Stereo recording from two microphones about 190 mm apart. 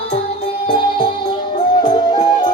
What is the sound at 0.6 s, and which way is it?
Music, 25° left (ahead or behind).